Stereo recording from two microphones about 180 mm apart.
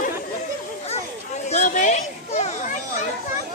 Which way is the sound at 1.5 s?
40° left (ahead or behind).